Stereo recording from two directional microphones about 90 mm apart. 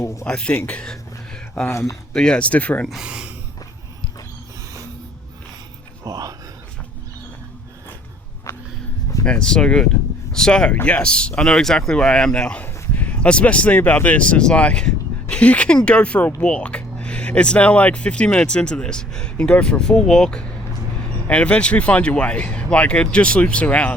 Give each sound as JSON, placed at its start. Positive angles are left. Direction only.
{"t": 0.0, "sound": "speech", "side_deg": 35}
{"t": 0.3, "sound": "speech", "side_deg": 10}
{"t": 0.7, "sound": "a sound", "side_deg": 10}
{"t": 1.7, "sound": "speech", "side_deg": 35}
{"t": 2.1, "sound": "speech", "side_deg": 10}
{"t": 3.0, "sound": "speech", "side_deg": -10}
{"t": 6.1, "sound": "a sound", "side_deg": -45}
{"t": 8.5, "sound": "walk", "side_deg": 30}
{"t": 9.2, "sound": "speech", "side_deg": 10}